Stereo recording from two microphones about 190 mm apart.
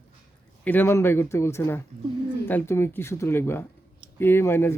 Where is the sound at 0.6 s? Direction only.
10° left (ahead or behind).